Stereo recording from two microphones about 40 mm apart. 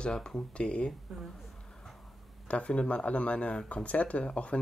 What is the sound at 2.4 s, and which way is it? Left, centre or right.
Speech, left.